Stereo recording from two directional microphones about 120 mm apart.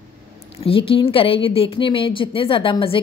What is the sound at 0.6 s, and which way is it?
A woman's voice, 50° left (ahead or behind).